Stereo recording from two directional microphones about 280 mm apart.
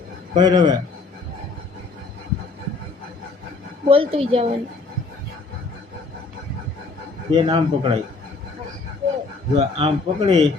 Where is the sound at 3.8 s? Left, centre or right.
Centre.